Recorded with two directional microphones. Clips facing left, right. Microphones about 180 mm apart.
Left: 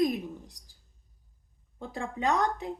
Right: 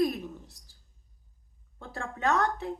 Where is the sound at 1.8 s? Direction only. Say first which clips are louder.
Left 1 dB; 15° left (ahead or behind).